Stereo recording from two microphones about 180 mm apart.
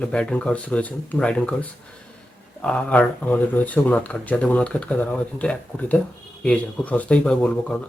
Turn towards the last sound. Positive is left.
turn(degrees=5)  # may be behind; listen again after turning